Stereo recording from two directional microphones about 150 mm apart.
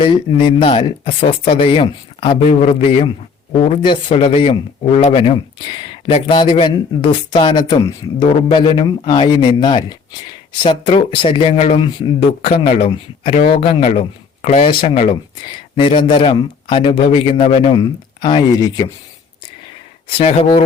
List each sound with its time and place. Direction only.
0.0 s speech: 35° left (ahead or behind)
17.7 s speech: 25° left (ahead or behind)
19.6 s a sound: 40° left (ahead or behind)